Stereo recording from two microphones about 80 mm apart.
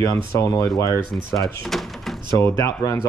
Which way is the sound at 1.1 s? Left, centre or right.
Centre.